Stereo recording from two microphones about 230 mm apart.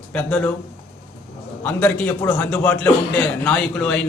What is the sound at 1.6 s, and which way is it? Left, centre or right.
A man's voice, centre.